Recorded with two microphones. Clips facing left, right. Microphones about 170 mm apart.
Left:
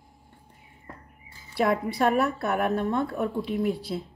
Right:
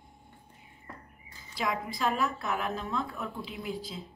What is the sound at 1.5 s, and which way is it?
Speech, 65° left (ahead or behind).